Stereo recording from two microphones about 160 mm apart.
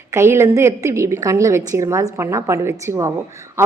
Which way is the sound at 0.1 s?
15° right (ahead or behind).